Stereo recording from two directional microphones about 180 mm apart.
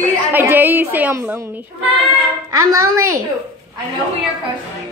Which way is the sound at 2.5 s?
15° right (ahead or behind).